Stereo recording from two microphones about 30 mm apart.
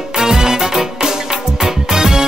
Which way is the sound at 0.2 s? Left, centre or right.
Centre.